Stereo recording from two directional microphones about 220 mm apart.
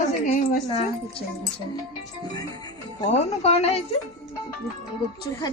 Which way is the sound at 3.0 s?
30° left (ahead or behind).